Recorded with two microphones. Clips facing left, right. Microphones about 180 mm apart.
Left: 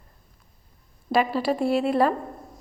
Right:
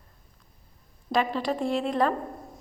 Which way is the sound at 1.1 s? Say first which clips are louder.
Left 4 dB; 10° left (ahead or behind).